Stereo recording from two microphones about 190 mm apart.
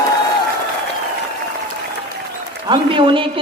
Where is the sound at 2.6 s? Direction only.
25° right (ahead or behind).